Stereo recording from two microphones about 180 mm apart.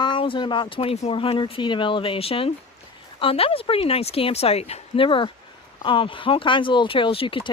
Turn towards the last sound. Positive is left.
turn(degrees=30)  # may be behind; listen again after turning